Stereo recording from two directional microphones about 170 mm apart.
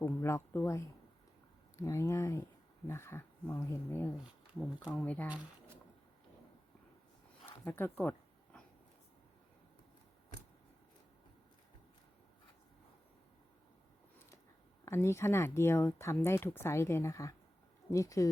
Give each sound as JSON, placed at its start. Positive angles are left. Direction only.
{"t": 0.0, "sound": "speech", "side_deg": 15}
{"t": 7.4, "sound": "speech", "side_deg": 10}
{"t": 14.8, "sound": "speech", "side_deg": 15}